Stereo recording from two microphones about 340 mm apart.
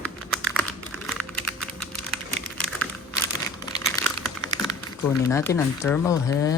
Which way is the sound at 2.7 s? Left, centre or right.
Centre.